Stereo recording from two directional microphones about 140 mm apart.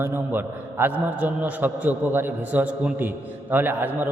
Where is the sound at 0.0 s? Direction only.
15° right (ahead or behind).